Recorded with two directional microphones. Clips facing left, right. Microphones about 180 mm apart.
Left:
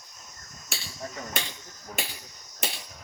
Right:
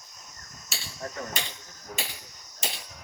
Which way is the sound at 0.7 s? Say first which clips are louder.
Left 2 dB; 55° left (ahead or behind).